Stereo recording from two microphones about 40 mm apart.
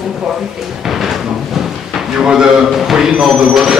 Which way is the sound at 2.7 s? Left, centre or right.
Centre.